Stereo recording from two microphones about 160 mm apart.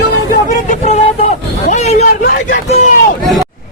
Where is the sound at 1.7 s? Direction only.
45° left (ahead or behind).